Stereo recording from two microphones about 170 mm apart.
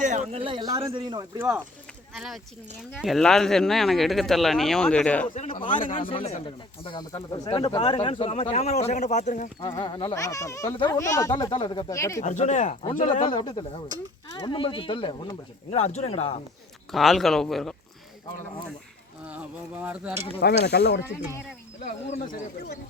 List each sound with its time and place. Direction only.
0.0 s speech: 45° right (ahead or behind); by 1.2 s 25° right (ahead or behind)
1.4 s speech: 10° right (ahead or behind)
2.1 s speech: centre (ahead or behind)
5.3 s a man's voice: 50° left (ahead or behind)
5.9 s speech: 30° left (ahead or behind); by 9.5 s 45° left (ahead or behind)
9.6 s speech: 30° left (ahead or behind)
12.2 s a man's voice: 45° left (ahead or behind)
13.2 s speech: 25° left (ahead or behind)
16.9 s speech: centre (ahead or behind)
19.3 s speech: 10° right (ahead or behind)
20.4 s speech: 75° left (ahead or behind)